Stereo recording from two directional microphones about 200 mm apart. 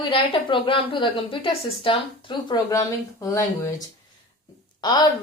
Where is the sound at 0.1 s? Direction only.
25° left (ahead or behind).